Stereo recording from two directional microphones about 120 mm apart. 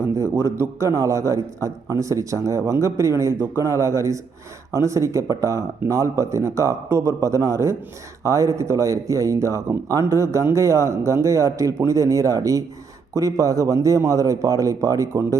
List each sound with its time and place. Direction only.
0.0 s speech: 20° right (ahead or behind)